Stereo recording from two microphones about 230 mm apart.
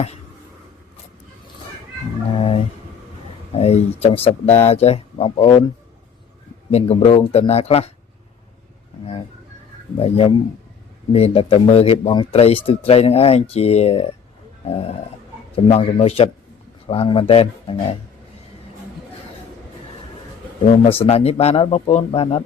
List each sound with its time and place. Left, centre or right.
2.3 s a sound: left
3.5 s a man's voice: left
10.0 s a man's voice: left
14.6 s a sound: left
15.5 s a man's voice: left
21.0 s a man's voice: left